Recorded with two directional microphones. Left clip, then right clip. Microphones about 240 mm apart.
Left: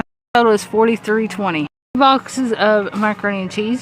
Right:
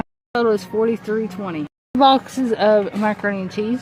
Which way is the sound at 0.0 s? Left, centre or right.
Centre.